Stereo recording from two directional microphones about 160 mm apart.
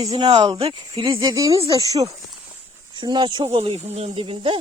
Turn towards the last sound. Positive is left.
turn(degrees=-35)  # may be behind; listen again after turning